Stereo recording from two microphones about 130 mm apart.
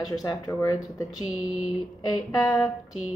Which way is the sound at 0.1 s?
30° left (ahead or behind).